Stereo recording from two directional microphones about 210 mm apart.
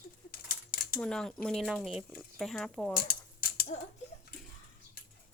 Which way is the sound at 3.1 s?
45° left (ahead or behind).